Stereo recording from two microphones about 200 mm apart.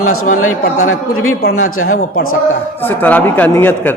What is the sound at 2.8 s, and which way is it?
A man's voice, 10° left (ahead or behind).